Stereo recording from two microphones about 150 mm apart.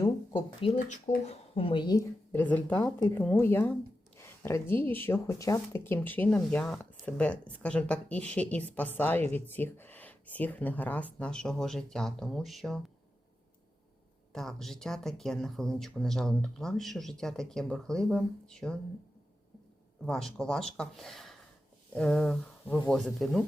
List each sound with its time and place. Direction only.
0.6 s a woman's voice: 45° left (ahead or behind); by 2.0 s 30° left (ahead or behind)
2.3 s speech: 10° left (ahead or behind)
14.3 s speech: centre (ahead or behind)
20.1 s speech: 5° left (ahead or behind)